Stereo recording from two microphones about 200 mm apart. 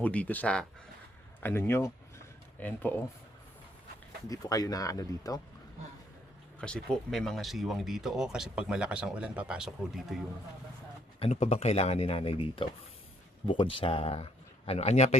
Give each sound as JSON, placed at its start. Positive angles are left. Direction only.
{"t": 0.0, "sound": "speech", "side_deg": 5}
{"t": 1.4, "sound": "a sound", "side_deg": 10}
{"t": 4.3, "sound": "speech", "side_deg": 20}
{"t": 6.6, "sound": "speech", "side_deg": 5}
{"t": 11.2, "sound": "speech", "side_deg": 35}